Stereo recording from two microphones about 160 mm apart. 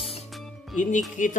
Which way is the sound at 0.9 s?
55° left (ahead or behind).